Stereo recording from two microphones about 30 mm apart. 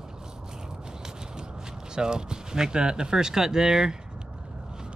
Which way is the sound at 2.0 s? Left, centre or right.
Right.